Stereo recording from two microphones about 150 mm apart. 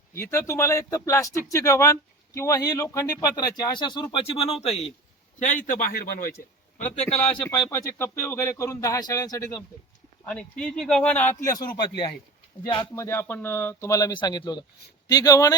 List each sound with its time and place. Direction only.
0.1 s speech: 15° left (ahead or behind); by 4.9 s 45° left (ahead or behind)
5.4 s speech: 60° left (ahead or behind); by 6.3 s 85° left
6.7 s a man's voice: 50° left (ahead or behind)
7.7 s speech: 20° left (ahead or behind)
10.2 s speech: 5° left (ahead or behind)
11.6 s speech: 30° left (ahead or behind)
13.0 s speech: 15° left (ahead or behind)